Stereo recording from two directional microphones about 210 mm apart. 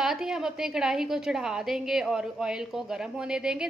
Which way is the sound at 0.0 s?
Centre (ahead or behind).